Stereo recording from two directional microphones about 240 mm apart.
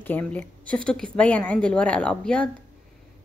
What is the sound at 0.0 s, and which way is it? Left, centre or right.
A woman's voice, centre.